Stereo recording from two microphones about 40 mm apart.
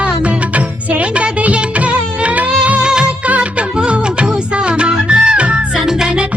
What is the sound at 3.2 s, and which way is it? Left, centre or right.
Music, right.